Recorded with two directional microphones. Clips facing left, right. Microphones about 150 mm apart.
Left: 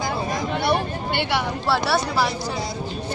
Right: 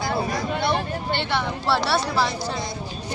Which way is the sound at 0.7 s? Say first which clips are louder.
Left 2 dB; 15° left (ahead or behind).